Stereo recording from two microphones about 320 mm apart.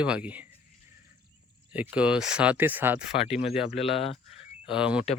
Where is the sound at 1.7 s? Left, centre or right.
Centre.